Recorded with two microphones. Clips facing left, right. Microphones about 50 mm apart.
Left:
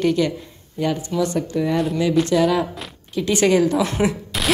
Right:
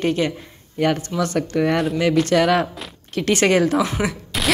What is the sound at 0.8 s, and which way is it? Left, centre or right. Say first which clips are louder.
Speech: right 1 dB; right.